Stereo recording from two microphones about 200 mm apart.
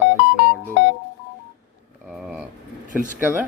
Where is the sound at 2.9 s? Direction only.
40° right (ahead or behind).